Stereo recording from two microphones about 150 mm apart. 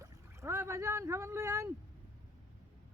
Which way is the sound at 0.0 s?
15° right (ahead or behind).